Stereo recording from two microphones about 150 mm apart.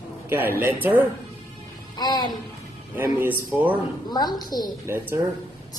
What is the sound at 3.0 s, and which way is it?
Speech, 15° right (ahead or behind).